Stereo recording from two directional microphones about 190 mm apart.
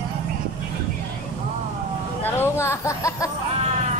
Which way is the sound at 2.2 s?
10° left (ahead or behind).